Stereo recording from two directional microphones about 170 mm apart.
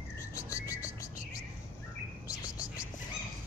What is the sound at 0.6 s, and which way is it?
Music, 20° left (ahead or behind).